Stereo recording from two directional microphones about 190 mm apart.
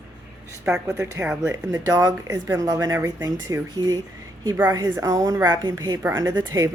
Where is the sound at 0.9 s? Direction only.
15° right (ahead or behind).